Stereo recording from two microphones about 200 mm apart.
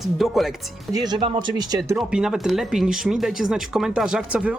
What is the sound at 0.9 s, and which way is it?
Speech, 20° right (ahead or behind).